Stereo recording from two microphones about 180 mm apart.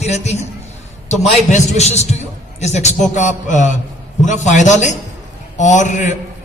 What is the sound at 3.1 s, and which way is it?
Music, 45° left (ahead or behind).